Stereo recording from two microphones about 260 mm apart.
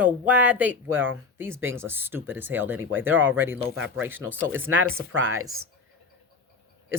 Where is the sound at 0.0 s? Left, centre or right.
Centre.